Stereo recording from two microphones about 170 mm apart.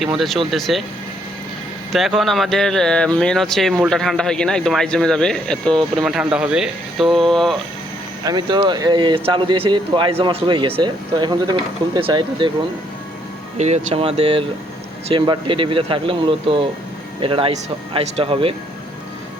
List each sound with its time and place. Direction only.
0.0 s speech: centre (ahead or behind)
1.9 s speech: centre (ahead or behind)
8.2 s speech: 25° right (ahead or behind)
13.6 s speech: 40° right (ahead or behind)